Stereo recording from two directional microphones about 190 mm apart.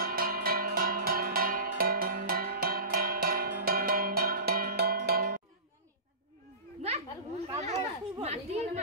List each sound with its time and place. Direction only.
0.0 s cowbell: 50° right (ahead or behind)
7.4 s chatter: 35° right (ahead or behind)